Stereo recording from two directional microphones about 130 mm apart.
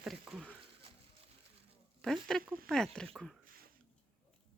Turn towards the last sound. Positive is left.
turn(degrees=5)  # may be behind; listen again after turning